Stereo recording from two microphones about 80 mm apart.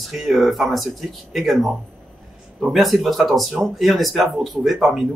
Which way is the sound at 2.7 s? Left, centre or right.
Centre.